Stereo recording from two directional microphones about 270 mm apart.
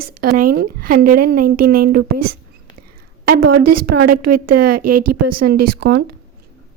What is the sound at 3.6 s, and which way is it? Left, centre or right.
A woman's voice, right.